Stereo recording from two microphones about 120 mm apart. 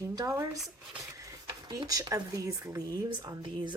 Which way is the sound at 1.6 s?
30° right (ahead or behind).